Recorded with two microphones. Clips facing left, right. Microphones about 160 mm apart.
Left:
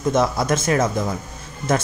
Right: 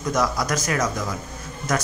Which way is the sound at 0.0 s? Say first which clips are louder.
Left 4 dB; 25° left (ahead or behind).